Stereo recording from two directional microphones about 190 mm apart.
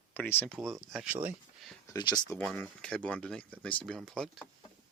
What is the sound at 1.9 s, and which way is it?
Speech, 20° left (ahead or behind).